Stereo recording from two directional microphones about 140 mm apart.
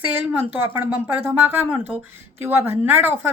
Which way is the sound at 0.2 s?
15° right (ahead or behind).